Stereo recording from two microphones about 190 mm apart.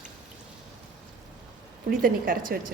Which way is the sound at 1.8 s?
50° right (ahead or behind).